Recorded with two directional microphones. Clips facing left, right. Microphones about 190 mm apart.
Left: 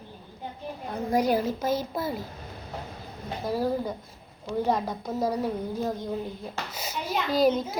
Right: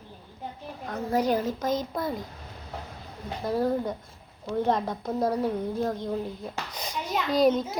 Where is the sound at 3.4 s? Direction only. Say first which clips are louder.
Right 1 dB; 5° left (ahead or behind).